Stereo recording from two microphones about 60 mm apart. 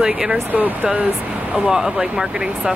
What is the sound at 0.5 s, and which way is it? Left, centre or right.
Speech, right.